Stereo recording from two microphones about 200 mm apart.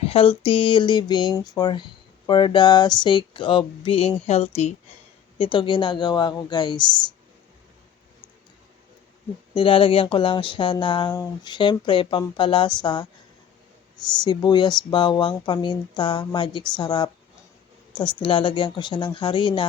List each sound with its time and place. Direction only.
0.0 s speech: 30° left (ahead or behind)
9.6 s speech: 25° left (ahead or behind)
14.3 s speech: 20° left (ahead or behind)